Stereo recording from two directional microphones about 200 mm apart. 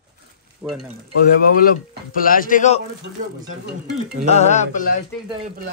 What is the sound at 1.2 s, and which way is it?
Speech, 45° left (ahead or behind).